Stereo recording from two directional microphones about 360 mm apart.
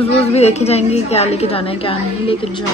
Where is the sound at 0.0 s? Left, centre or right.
Centre.